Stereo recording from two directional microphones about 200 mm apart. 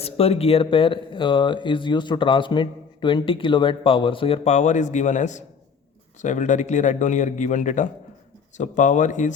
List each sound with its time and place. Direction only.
0.0 s speech: 30° left (ahead or behind)